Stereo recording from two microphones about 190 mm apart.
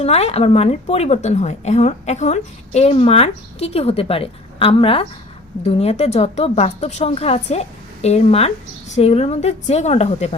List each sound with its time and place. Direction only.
0.0 s a woman's voice: 35° left (ahead or behind)